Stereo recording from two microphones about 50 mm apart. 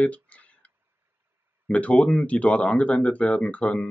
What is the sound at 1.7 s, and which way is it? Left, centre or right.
Speech, left.